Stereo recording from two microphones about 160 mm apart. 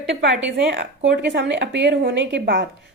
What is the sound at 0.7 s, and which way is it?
A woman's voice, 90° right.